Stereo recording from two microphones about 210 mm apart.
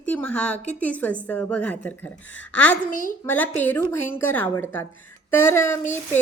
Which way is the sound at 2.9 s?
40° left (ahead or behind).